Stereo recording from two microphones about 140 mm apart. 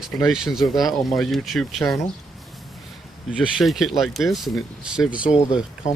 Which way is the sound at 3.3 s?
Centre (ahead or behind).